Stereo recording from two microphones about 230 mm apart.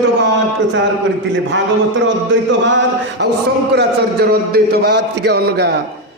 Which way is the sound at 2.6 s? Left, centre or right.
Right.